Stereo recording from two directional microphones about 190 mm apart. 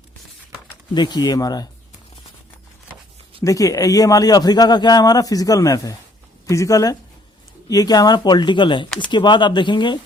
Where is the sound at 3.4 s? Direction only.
15° left (ahead or behind).